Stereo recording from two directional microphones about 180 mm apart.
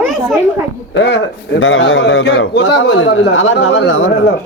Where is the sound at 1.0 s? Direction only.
75° left (ahead or behind); by 4.1 s 90° left.